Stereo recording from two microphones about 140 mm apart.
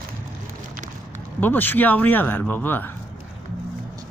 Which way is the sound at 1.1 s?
15° left (ahead or behind).